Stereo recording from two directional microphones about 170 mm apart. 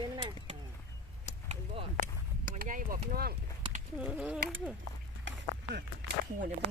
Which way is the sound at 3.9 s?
5° right (ahead or behind).